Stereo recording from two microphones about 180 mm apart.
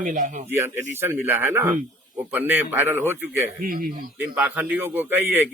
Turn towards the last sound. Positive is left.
turn(degrees=-10)  # may be behind; listen again after turning